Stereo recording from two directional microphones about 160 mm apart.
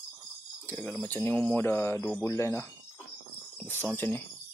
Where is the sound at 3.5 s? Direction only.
15° left (ahead or behind).